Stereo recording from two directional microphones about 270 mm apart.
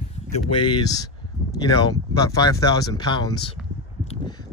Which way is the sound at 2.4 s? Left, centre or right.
Centre.